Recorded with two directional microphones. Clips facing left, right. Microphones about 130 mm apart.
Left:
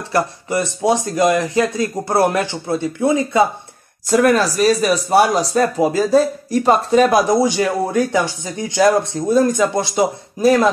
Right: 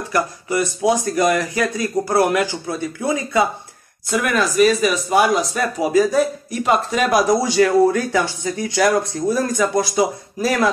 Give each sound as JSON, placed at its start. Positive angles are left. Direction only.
{"t": 0.1, "sound": "speech", "side_deg": 25}
{"t": 4.2, "sound": "speech", "side_deg": 35}